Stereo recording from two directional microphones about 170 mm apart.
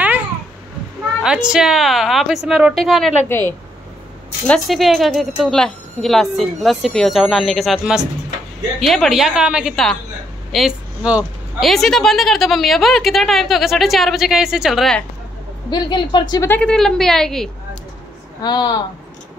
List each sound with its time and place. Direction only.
1.2 s a woman's voice: 5° right (ahead or behind)
3.3 s a woman's voice: 15° left (ahead or behind)
4.5 s a woman's voice: centre (ahead or behind)
15.7 s speech: 25° left (ahead or behind)
16.4 s a woman's voice: 5° left (ahead or behind)
18.4 s speech: 25° left (ahead or behind)